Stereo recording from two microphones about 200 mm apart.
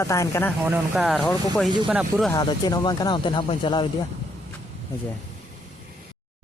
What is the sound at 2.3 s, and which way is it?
Speech, 20° left (ahead or behind).